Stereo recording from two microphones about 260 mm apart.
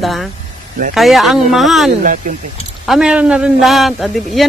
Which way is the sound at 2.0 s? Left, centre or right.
Right.